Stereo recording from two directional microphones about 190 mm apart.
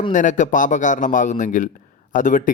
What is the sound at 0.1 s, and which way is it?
Speech, 40° left (ahead or behind).